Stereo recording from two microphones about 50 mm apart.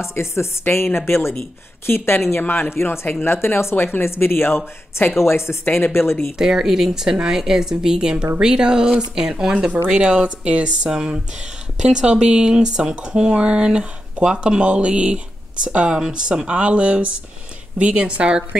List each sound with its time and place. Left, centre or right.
0.0 s speech: left
2.7 s speech: left
5.2 s speech: left
6.3 s speech: centre